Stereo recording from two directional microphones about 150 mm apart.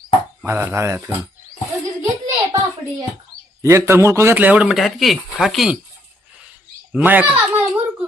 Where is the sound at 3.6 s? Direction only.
20° right (ahead or behind); by 5.8 s 5° right (ahead or behind).